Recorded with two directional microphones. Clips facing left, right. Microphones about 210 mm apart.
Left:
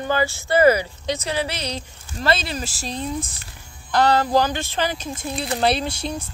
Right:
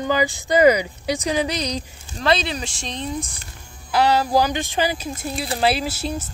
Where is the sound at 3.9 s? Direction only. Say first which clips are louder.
Even; 10° right (ahead or behind).